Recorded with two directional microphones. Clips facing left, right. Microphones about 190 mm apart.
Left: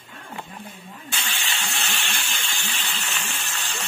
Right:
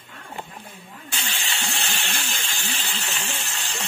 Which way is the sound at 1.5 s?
30° right (ahead or behind).